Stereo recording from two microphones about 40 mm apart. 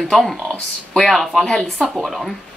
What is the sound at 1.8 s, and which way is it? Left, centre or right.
Speech, centre.